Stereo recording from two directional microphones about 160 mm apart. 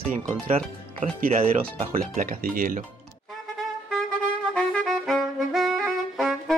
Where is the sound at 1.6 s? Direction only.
60° right (ahead or behind).